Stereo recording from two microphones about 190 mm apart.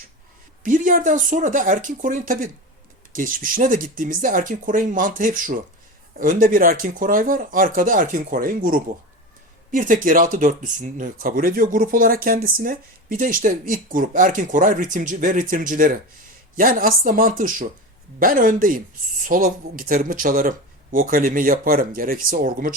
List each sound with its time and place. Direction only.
0.6 s speech: 45° right (ahead or behind)